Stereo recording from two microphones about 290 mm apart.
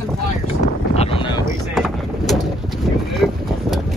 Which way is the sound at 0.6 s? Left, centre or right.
Left.